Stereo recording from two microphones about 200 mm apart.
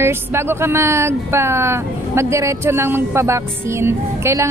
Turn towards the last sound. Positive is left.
turn(degrees=-15)  # may be behind; listen again after turning